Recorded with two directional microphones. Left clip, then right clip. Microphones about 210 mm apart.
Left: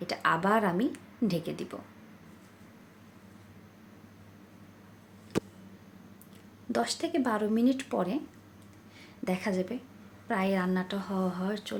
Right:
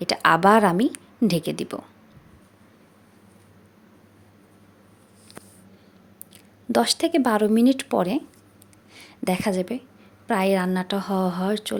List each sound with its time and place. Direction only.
0.0 s a woman's voice: 50° right (ahead or behind)
6.7 s a woman's voice: 45° right (ahead or behind)